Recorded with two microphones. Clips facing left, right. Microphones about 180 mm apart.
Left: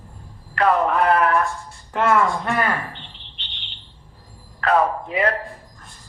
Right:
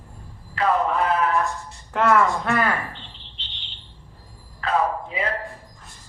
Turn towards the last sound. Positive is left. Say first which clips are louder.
# left 4 dB
turn(degrees=65)  # may be behind; listen again after turning